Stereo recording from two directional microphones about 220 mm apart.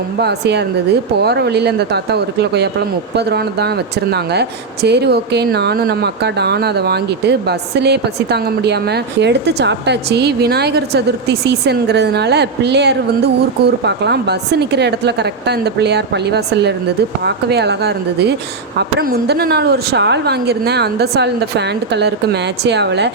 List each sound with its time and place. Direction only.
0.2 s speech: 50° right (ahead or behind)